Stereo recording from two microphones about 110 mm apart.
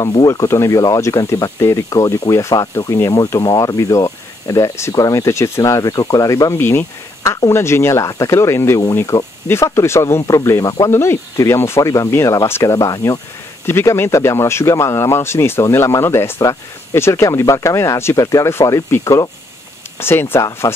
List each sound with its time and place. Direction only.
0.3 s speech: 25° left (ahead or behind)
20.6 s speech: 35° left (ahead or behind)